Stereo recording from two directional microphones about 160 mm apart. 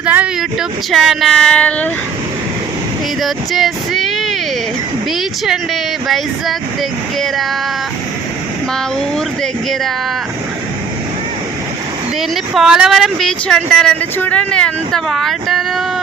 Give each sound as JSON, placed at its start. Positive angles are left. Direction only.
{"t": 0.0, "sound": "speech", "side_deg": -10}
{"t": 3.2, "sound": "speech", "side_deg": 0}
{"t": 6.1, "sound": "speech", "side_deg": 0}
{"t": 9.1, "sound": "speech", "side_deg": 5}
{"t": 12.5, "sound": "speech", "side_deg": -5}